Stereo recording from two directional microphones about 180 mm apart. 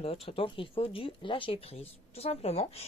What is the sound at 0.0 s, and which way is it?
Speech, 30° left (ahead or behind).